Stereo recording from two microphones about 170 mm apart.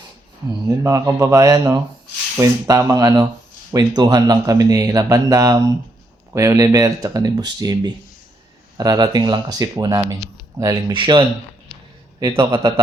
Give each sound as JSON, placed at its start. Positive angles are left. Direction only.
{"t": 0.7, "sound": "a man's voice", "side_deg": -20}